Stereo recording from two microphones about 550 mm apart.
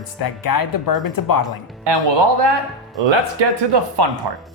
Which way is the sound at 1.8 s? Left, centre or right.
Right.